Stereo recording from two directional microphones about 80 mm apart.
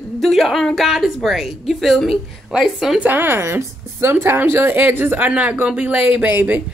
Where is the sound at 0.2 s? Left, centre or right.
Centre.